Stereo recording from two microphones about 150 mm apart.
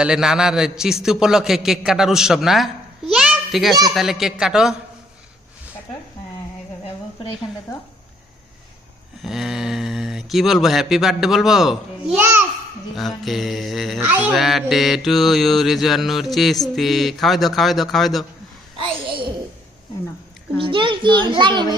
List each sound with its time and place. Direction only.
0.0 s mantra: 5° right (ahead or behind)
3.1 s a sound: 5° right (ahead or behind)
3.9 s mantra: centre (ahead or behind)
9.2 s mantra: centre (ahead or behind)
12.2 s a child's voice: 15° right (ahead or behind)
13.2 s mantra: centre (ahead or behind)
18.8 s a child's voice: 35° right (ahead or behind)
20.6 s a child's voice: 35° right (ahead or behind)